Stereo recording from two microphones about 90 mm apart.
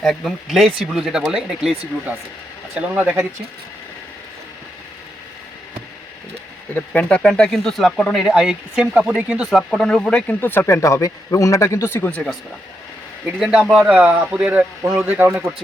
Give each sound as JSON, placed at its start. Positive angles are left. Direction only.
{"t": 0.0, "sound": "speech", "side_deg": 0}
{"t": 2.7, "sound": "speech", "side_deg": -20}
{"t": 6.9, "sound": "speech", "side_deg": 15}
{"t": 9.5, "sound": "speech", "side_deg": 0}
{"t": 10.4, "sound": "speech", "side_deg": 25}
{"t": 12.1, "sound": "speech", "side_deg": 10}
{"t": 13.4, "sound": "speech", "side_deg": -5}